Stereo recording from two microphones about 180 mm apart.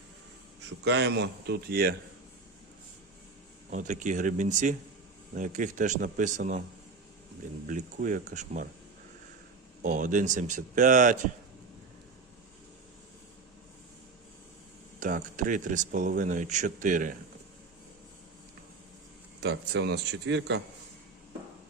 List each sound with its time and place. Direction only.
0.9 s speech: 75° right (ahead or behind)
3.7 s speech: 45° right (ahead or behind)
7.7 s speech: 45° right (ahead or behind)
9.8 s speech: 45° right (ahead or behind)
14.9 s speech: 45° right (ahead or behind)
19.4 s speech: 70° right (ahead or behind)